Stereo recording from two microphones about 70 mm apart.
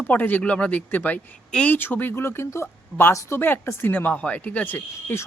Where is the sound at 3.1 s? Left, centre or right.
Left.